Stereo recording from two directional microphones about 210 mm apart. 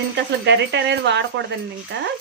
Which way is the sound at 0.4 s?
55° right (ahead or behind).